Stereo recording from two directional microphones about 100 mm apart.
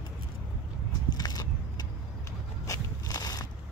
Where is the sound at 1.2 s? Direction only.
40° left (ahead or behind).